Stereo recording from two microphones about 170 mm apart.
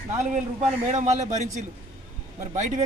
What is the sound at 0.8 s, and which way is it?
Speech, 45° right (ahead or behind).